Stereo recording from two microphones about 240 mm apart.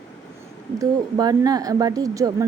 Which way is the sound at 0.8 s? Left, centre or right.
Centre.